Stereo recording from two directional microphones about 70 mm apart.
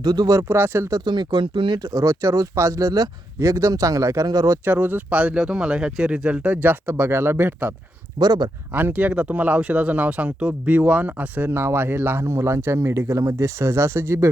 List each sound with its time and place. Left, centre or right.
0.0 s speech: right
0.3 s speech: right
1.0 s speech: right
1.9 s speech: right
3.3 s speech: right
4.6 s speech: right
8.2 s speech: right
8.7 s speech: right